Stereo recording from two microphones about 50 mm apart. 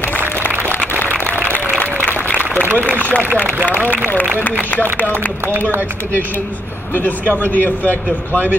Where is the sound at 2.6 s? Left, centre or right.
Right.